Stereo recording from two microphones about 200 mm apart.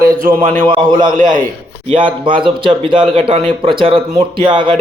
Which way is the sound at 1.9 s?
25° right (ahead or behind).